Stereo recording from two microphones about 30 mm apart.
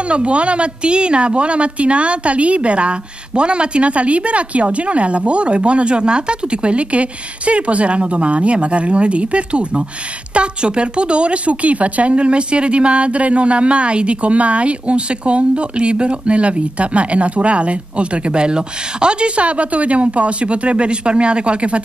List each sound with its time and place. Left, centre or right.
0.1 s speech: right